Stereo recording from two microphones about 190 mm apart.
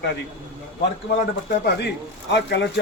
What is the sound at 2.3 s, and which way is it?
Speech, 65° left (ahead or behind).